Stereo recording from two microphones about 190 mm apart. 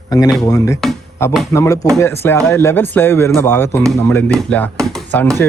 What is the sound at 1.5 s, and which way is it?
A man's voice, 15° left (ahead or behind).